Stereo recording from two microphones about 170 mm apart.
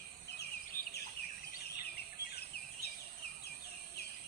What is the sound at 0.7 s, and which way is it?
Bird, 15° left (ahead or behind).